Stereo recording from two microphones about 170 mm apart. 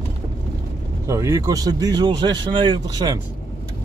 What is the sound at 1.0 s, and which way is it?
Speech, 15° right (ahead or behind).